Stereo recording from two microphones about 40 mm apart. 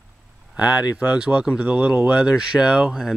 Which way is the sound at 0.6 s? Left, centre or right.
Right.